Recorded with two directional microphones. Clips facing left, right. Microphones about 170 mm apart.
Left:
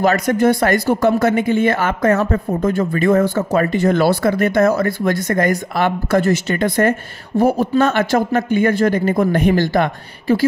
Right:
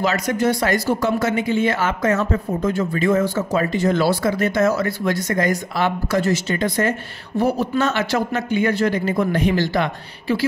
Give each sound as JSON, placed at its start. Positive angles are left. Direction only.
{"t": 0.0, "sound": "speech", "side_deg": 55}